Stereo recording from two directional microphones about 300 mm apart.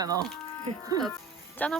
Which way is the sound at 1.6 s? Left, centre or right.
Centre.